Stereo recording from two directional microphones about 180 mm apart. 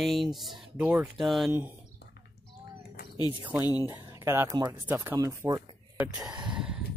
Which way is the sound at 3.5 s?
10° right (ahead or behind).